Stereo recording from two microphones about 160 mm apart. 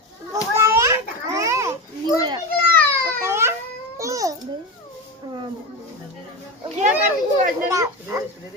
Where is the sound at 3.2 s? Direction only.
15° right (ahead or behind).